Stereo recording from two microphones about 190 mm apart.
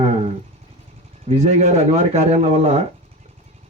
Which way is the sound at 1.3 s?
35° right (ahead or behind).